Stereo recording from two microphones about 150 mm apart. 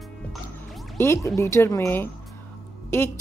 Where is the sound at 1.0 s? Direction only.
20° left (ahead or behind).